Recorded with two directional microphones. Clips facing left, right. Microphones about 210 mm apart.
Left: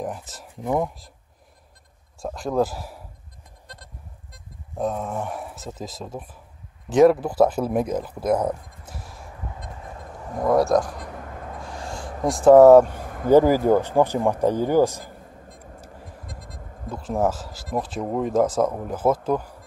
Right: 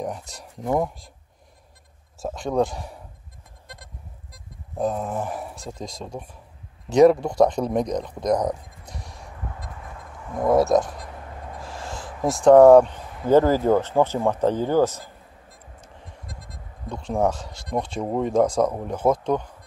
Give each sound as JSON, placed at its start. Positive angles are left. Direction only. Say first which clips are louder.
{"t": 0.0, "sound": "speech", "louder": "even", "side_deg": 0}
{"t": 2.1, "sound": "speech", "louder": "even", "side_deg": 0}
{"t": 4.3, "sound": "speech", "louder": "right 1 dB", "side_deg": 0}
{"t": 11.6, "sound": "owl", "louder": "even", "side_deg": 0}
{"t": 12.2, "sound": "speech", "louder": "left 1 dB", "side_deg": 0}
{"t": 12.8, "sound": "a sound", "louder": "left 2 dB", "side_deg": 50}
{"t": 13.3, "sound": "speech", "louder": "left 1 dB", "side_deg": 10}
{"t": 16.1, "sound": "vehicle", "louder": "left 2 dB", "side_deg": 0}
{"t": 16.9, "sound": "speech", "louder": "even", "side_deg": 5}